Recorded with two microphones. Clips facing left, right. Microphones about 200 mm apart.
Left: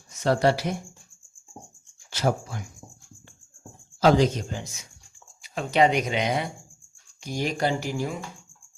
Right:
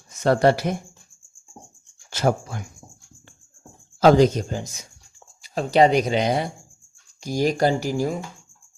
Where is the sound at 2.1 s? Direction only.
55° right (ahead or behind).